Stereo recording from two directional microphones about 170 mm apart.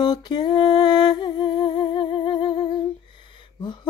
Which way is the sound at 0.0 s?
25° left (ahead or behind).